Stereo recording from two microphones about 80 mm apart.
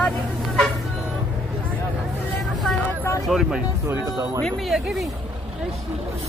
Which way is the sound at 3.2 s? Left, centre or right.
Centre.